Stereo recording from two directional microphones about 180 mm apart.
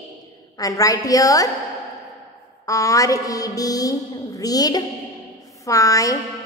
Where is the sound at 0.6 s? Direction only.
20° left (ahead or behind).